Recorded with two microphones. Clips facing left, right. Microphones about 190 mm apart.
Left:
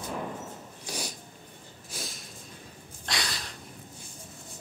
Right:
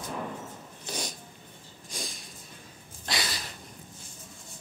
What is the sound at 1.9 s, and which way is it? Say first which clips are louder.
Snort: right 1 dB; 5° left (ahead or behind).